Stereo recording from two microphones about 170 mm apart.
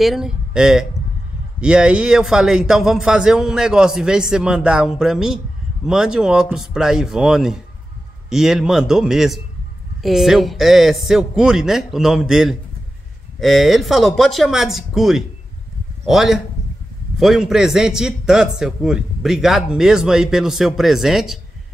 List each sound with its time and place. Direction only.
0.0 s a man's voice: centre (ahead or behind)